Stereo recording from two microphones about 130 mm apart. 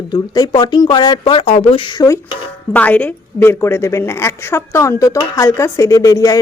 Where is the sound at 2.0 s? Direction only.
25° left (ahead or behind).